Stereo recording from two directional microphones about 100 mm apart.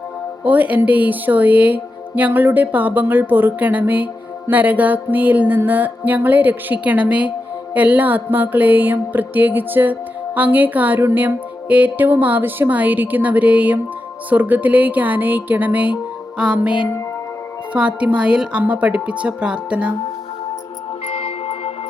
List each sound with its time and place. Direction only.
0.4 s speech: 15° right (ahead or behind)
21.1 s music: 80° left